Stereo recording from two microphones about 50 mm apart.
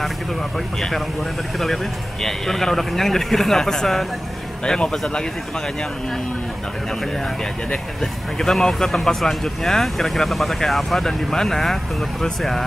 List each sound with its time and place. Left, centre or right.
0.7 s a man's voice: centre
2.2 s a man's voice: centre
7.7 s speech: centre